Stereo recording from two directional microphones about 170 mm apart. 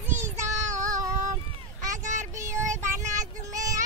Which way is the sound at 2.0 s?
45° right (ahead or behind).